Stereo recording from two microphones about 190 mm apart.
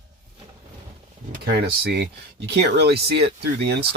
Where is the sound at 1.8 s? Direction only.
60° right (ahead or behind).